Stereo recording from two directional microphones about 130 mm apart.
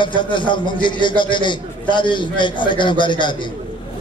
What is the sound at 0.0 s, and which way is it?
A man's voice, 40° left (ahead or behind).